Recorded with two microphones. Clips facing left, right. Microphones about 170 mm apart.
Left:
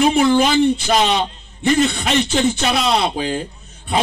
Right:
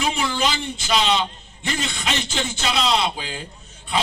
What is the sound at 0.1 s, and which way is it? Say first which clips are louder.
Speech: left 10 dB; 55° left (ahead or behind).